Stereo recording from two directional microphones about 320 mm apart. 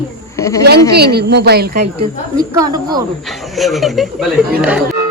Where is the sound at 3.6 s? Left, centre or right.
Centre.